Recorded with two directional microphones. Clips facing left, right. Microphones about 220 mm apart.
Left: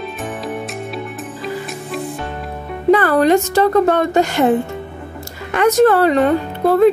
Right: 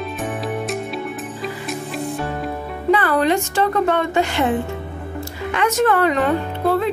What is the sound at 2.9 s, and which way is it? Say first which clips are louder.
Speech: left 5 dB; 45° left (ahead or behind).